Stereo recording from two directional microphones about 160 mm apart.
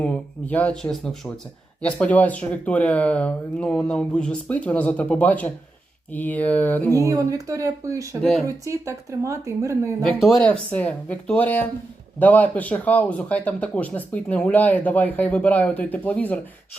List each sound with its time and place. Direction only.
0.0 s speech: 10° left (ahead or behind)
6.9 s speech: 20° right (ahead or behind)
8.2 s speech: centre (ahead or behind)
8.4 s speech: 20° right (ahead or behind)
10.0 s speech: centre (ahead or behind)